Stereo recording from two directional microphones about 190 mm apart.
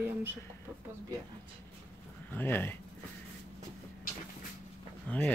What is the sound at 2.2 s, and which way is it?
Speech, 10° left (ahead or behind).